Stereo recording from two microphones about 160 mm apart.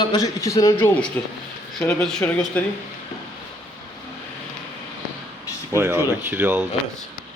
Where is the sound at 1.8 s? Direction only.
5° left (ahead or behind).